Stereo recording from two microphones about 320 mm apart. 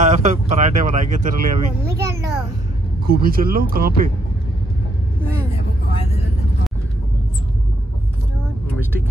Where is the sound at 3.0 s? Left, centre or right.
Right.